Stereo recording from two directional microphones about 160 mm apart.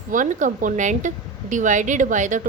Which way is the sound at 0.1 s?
55° right (ahead or behind).